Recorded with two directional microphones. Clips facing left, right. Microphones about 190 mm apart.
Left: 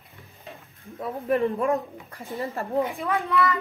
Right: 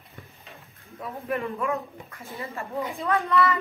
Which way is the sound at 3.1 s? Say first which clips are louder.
Right 1 dB; centre (ahead or behind).